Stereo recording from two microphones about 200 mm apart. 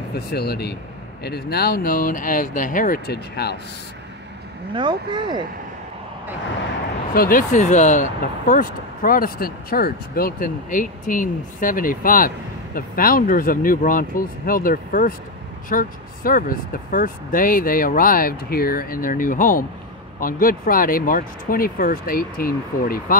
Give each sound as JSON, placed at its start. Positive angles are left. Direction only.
{"t": 0.3, "sound": "speech", "side_deg": 50}
{"t": 4.7, "sound": "speech", "side_deg": -25}
{"t": 7.2, "sound": "speech", "side_deg": 45}